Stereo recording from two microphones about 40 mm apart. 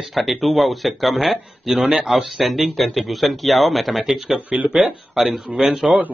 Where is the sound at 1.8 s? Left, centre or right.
Centre.